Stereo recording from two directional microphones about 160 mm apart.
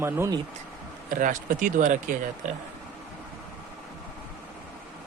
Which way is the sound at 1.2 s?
55° right (ahead or behind).